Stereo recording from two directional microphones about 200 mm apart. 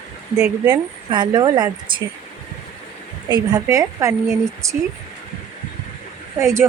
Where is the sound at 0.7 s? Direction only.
20° right (ahead or behind).